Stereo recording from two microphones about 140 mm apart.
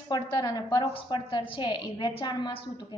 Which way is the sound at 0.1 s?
30° left (ahead or behind).